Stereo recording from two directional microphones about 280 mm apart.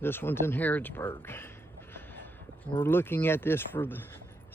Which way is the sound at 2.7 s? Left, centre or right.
Centre.